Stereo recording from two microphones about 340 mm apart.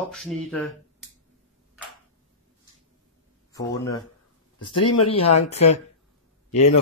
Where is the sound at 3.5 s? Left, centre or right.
Centre.